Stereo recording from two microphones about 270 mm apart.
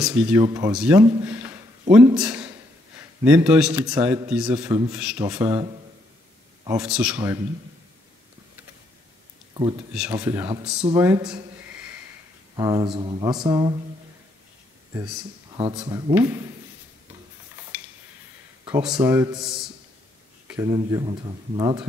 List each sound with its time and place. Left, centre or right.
0.0 s speech: centre
1.2 s a sound: centre
2.1 s a man's voice: centre
6.8 s speech: centre
9.5 s speech: centre
9.9 s speech: centre
12.5 s speech: centre
15.5 s speech: centre
18.7 s a man's voice: centre
20.5 s speech: centre